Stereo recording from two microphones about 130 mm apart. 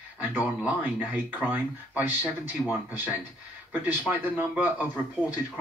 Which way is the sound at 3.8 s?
10° right (ahead or behind).